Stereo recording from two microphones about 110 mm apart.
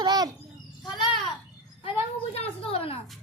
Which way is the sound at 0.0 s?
40° right (ahead or behind).